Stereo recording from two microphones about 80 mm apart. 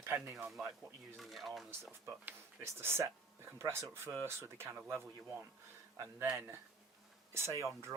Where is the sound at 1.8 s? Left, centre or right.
Right.